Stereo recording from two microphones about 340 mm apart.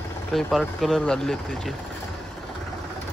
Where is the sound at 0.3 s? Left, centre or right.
Centre.